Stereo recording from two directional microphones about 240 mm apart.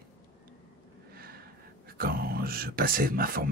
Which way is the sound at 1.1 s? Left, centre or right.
Right.